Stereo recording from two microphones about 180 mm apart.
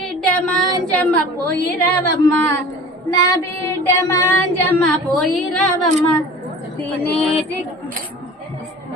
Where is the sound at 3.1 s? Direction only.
15° left (ahead or behind).